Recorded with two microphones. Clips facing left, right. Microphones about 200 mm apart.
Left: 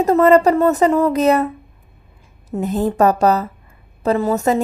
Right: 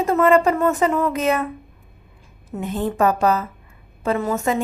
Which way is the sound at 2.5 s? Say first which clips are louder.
Left 5 dB; 40° left (ahead or behind).